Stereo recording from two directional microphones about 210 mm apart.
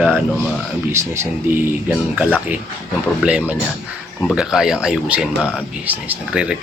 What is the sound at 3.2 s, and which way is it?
Speech, 5° right (ahead or behind).